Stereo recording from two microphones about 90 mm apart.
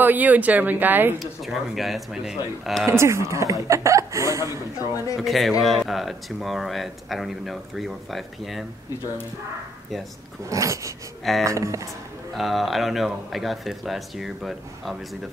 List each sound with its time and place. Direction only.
0.0 s speech: 20° right (ahead or behind)
1.2 s speech: centre (ahead or behind)
2.9 s speech: 30° right (ahead or behind)
5.1 s speech: centre (ahead or behind)
10.5 s speech: 35° right (ahead or behind)
12.4 s speech: centre (ahead or behind)